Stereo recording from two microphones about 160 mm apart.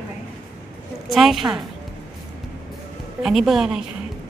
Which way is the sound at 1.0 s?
Centre (ahead or behind).